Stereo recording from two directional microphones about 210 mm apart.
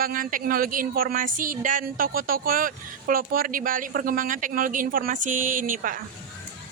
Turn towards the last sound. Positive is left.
turn(degrees=-40)  # may be behind; listen again after turning